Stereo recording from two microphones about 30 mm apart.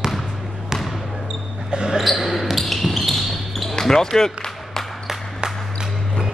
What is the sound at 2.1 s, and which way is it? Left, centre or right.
Basketball bounce, centre.